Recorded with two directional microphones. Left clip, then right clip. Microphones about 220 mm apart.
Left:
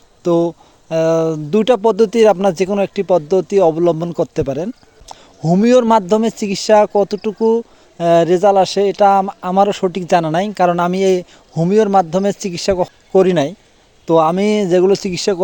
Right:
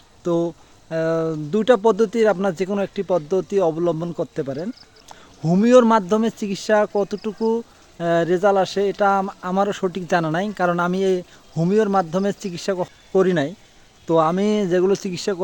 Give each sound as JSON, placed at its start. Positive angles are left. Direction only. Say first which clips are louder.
{"t": 0.2, "sound": "speech", "louder": "left 7 dB", "side_deg": 25}